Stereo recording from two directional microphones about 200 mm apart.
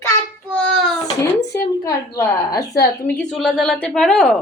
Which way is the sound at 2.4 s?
15° left (ahead or behind).